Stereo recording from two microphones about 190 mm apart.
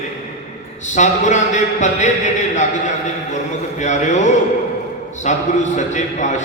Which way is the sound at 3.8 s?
40° left (ahead or behind).